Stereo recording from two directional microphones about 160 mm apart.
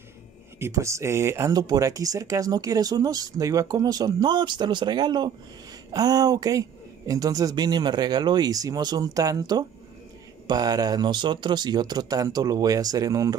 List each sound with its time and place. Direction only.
0.6 s speech: 20° right (ahead or behind)